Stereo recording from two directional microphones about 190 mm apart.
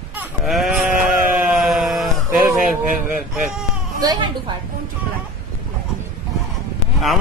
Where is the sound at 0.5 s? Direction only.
Centre (ahead or behind).